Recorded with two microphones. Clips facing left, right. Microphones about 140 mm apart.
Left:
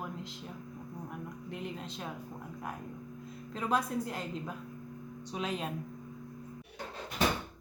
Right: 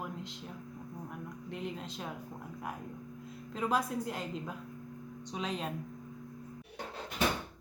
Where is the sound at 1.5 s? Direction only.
Centre (ahead or behind).